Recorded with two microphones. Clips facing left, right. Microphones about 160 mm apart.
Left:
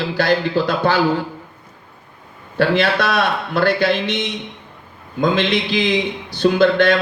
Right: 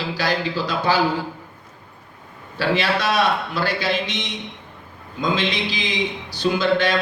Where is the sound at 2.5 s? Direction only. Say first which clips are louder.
Left 5 dB; 55° left (ahead or behind).